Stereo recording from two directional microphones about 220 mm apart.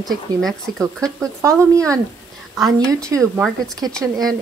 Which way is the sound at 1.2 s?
15° right (ahead or behind).